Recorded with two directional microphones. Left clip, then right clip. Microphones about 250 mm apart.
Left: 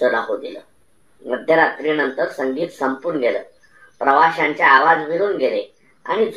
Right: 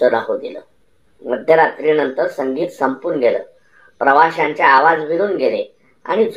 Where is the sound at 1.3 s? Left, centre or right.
Right.